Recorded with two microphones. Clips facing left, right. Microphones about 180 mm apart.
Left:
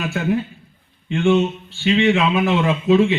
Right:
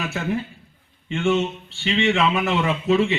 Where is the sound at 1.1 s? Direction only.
Centre (ahead or behind).